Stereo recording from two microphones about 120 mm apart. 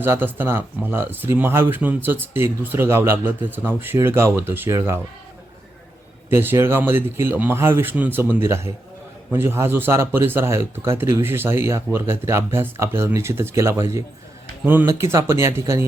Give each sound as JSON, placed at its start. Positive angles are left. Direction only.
{"t": 0.0, "sound": "speech", "side_deg": -15}
{"t": 6.3, "sound": "speech", "side_deg": -20}